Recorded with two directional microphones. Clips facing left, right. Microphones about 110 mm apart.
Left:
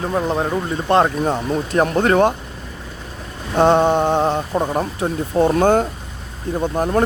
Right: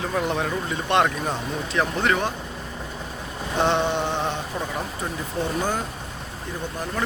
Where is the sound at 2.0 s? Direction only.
50° left (ahead or behind).